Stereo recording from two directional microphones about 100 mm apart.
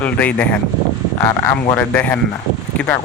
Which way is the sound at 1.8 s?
15° left (ahead or behind).